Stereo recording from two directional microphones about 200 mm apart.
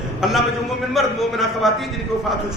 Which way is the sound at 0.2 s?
Centre (ahead or behind).